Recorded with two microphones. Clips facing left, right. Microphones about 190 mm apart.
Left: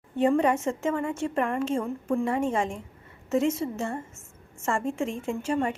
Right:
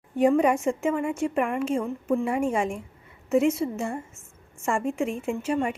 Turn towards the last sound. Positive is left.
turn(degrees=-10)  # may be behind; listen again after turning